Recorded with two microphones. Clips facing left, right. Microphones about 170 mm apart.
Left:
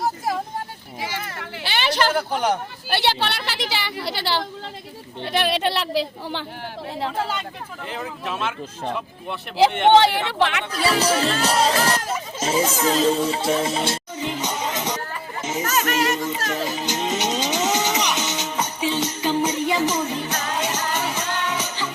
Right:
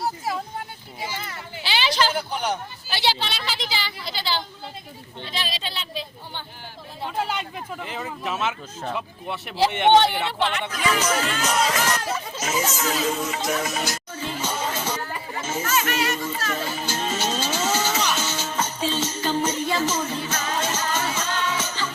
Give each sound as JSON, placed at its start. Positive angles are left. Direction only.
{"t": 0.9, "sound": "a sound", "side_deg": 90}
{"t": 1.6, "sound": "a woman's voice", "side_deg": 55}
{"t": 7.9, "sound": "speech", "side_deg": 0}
{"t": 10.0, "sound": "a woman's voice", "side_deg": 75}
{"t": 10.7, "sound": "speech", "side_deg": 35}
{"t": 14.3, "sound": "music", "side_deg": 15}
{"t": 15.6, "sound": "music", "side_deg": 40}
{"t": 16.1, "sound": "music", "side_deg": 20}